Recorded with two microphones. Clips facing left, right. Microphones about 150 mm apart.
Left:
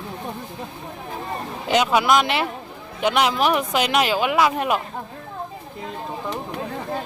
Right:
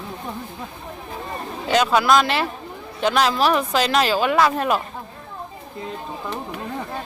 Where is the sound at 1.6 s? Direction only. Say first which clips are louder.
Right 1 dB; 15° left (ahead or behind).